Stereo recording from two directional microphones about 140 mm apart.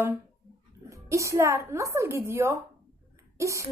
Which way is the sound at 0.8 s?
20° right (ahead or behind).